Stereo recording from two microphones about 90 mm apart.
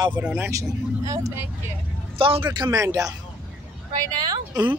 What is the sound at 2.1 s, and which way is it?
Speech, 85° right.